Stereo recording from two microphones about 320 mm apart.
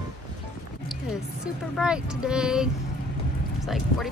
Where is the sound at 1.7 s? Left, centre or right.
Centre.